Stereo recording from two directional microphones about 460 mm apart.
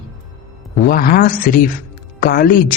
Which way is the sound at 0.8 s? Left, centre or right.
Centre.